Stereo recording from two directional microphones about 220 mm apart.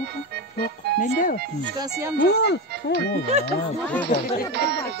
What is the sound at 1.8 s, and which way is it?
Speech, 15° right (ahead or behind).